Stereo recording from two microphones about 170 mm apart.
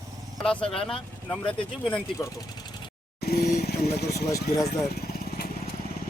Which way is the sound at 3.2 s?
65° left (ahead or behind).